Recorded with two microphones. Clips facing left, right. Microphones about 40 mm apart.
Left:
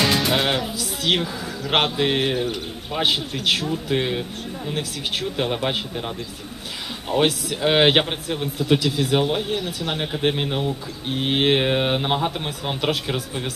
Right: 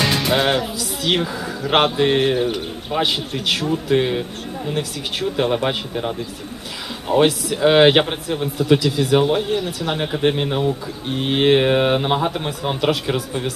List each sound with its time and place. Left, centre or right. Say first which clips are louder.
0.3 s speech: right 3 dB; centre
1.2 s a man's voice: right 4 dB; centre
2.0 s speech: right 4 dB; centre
2.9 s speech: right 3 dB; centre
3.4 s speech: right 3 dB; centre
7.2 s speech: right 4 dB; centre
9.1 s speech: right 6 dB; centre